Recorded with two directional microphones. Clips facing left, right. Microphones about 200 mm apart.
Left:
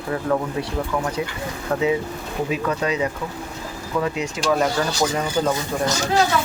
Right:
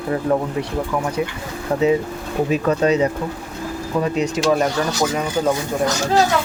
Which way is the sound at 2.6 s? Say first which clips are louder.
Right 7 dB; 35° right (ahead or behind).